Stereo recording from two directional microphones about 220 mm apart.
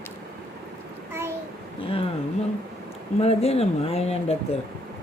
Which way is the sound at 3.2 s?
30° left (ahead or behind).